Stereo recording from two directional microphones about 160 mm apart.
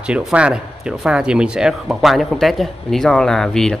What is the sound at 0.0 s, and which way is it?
Speech, 5° right (ahead or behind).